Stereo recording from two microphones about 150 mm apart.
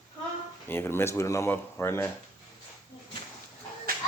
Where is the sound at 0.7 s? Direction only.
15° left (ahead or behind).